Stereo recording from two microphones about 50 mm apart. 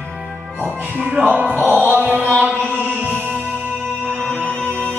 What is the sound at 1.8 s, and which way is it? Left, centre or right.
Music, right.